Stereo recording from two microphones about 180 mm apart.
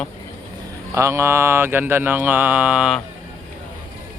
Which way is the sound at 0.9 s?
15° right (ahead or behind).